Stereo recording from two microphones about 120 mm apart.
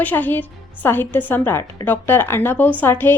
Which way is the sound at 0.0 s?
15° left (ahead or behind).